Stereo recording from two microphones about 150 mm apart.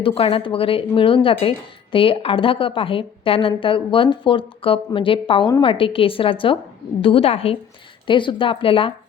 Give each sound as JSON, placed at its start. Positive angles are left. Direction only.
{"t": 0.0, "sound": "speech", "side_deg": 35}
{"t": 5.5, "sound": "a woman's voice", "side_deg": 25}
{"t": 5.7, "sound": "speech", "side_deg": 35}